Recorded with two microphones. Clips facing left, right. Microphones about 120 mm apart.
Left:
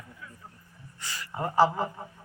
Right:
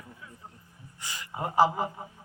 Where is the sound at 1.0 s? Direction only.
15° right (ahead or behind).